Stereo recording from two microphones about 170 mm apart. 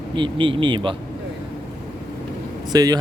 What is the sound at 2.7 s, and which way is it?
Speech, 20° right (ahead or behind).